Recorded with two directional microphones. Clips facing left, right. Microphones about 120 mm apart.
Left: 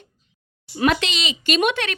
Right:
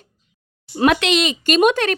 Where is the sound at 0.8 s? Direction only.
60° right (ahead or behind); by 2.0 s 40° right (ahead or behind).